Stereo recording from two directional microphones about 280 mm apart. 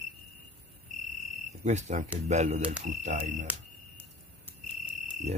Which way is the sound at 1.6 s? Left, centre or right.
Right.